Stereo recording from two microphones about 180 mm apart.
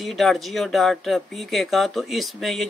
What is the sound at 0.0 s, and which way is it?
Speech, centre (ahead or behind).